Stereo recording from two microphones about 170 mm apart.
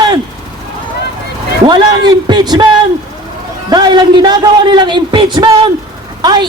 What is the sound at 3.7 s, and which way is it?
A man's voice, 25° right (ahead or behind).